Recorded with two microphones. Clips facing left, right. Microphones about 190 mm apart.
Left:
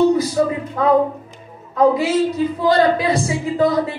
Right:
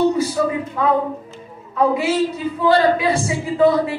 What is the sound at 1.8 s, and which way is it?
A man's voice, 35° left (ahead or behind).